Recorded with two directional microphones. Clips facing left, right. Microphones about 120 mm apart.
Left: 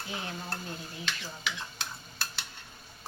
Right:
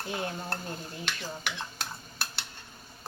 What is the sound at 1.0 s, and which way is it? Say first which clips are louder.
Stir: right 1 dB; 60° right (ahead or behind).